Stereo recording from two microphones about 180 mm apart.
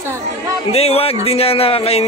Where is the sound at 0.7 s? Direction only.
35° left (ahead or behind).